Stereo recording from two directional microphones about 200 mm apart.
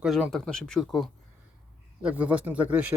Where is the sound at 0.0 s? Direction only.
Centre (ahead or behind).